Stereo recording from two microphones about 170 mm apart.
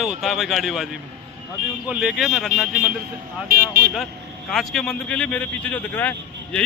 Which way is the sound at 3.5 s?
65° right (ahead or behind).